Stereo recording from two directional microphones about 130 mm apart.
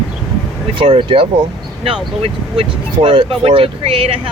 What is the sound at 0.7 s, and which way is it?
Speech, 45° right (ahead or behind).